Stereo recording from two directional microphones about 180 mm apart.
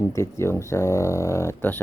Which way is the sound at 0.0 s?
15° left (ahead or behind).